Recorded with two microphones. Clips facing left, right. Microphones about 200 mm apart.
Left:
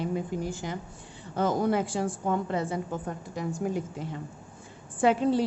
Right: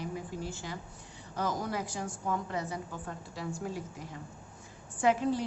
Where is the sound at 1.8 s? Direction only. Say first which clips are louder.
Left 8 dB; 30° left (ahead or behind).